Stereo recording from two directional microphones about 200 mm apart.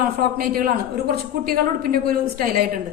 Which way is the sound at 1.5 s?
45° right (ahead or behind).